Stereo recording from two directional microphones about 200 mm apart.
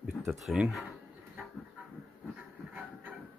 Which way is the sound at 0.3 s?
Centre (ahead or behind).